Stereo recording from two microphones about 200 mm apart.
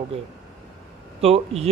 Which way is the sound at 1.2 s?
30° right (ahead or behind).